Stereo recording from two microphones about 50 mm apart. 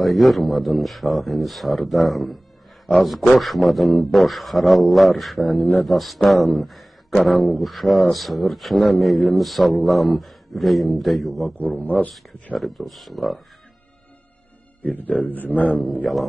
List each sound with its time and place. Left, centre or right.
0.0 s a man's voice: centre
11.5 s a man's voice: left
12.5 s a man's voice: centre
14.8 s a man's voice: left
15.8 s a man's voice: centre